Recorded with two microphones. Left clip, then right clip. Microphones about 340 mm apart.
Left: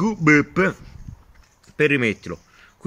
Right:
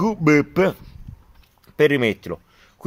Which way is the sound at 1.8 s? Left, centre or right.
Centre.